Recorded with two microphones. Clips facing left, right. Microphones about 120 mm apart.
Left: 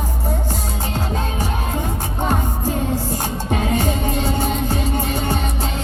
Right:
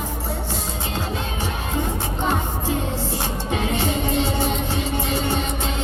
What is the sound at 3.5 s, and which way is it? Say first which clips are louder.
Music: left 3 dB; 45° left (ahead or behind).